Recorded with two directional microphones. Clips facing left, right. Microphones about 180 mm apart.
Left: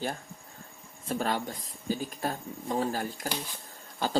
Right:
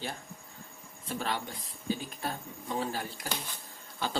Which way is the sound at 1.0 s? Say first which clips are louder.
Left 4 dB; 45° left (ahead or behind).